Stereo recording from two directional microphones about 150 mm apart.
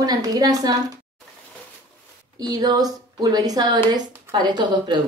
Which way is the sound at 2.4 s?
25° right (ahead or behind).